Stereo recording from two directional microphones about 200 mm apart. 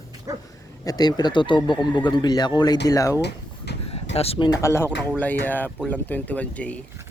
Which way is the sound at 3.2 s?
55° left (ahead or behind).